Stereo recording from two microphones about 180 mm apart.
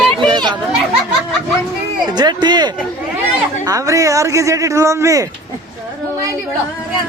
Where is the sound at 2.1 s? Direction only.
25° right (ahead or behind).